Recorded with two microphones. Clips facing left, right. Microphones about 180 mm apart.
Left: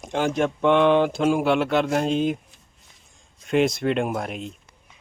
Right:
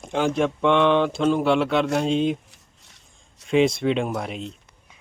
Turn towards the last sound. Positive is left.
turn(degrees=0)  # may be behind; listen again after turning